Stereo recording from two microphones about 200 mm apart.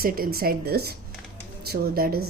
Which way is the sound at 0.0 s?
50° right (ahead or behind).